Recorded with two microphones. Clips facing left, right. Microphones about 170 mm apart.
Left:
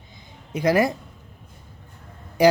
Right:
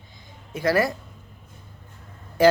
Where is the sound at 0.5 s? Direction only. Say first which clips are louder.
Left 2 dB; 20° left (ahead or behind).